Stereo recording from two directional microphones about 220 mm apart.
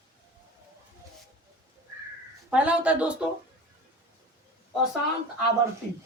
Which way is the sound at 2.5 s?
5° right (ahead or behind).